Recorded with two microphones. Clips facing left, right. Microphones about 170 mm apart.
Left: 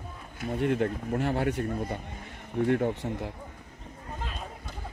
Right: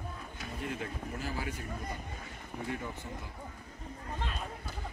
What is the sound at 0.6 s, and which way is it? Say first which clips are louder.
Speech: left 12 dB; 60° left (ahead or behind).